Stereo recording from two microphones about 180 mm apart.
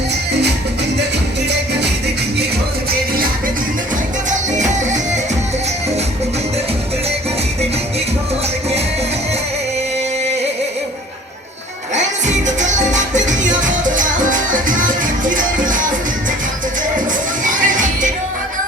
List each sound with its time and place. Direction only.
4.3 s music: 40° right (ahead or behind)
11.9 s music: 40° right (ahead or behind)
17.4 s music: 45° right (ahead or behind)